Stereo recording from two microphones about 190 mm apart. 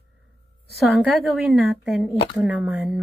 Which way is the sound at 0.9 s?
Centre (ahead or behind).